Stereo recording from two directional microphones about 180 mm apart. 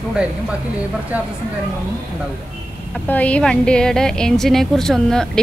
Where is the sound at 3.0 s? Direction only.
10° left (ahead or behind).